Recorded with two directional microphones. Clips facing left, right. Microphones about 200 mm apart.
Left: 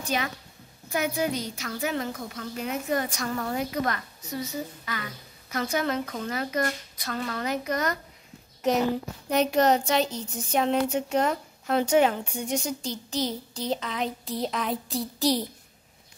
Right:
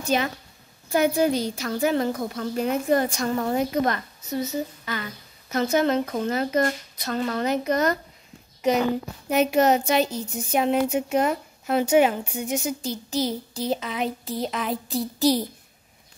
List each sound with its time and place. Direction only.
0.0 s a woman's voice: 25° right (ahead or behind)
8.6 s speech: centre (ahead or behind)